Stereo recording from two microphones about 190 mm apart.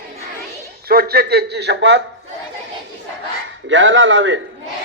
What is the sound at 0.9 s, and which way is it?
A man's voice, 50° right (ahead or behind).